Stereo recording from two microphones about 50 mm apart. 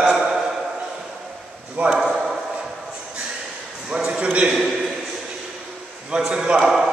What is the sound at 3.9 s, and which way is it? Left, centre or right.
Speech, centre.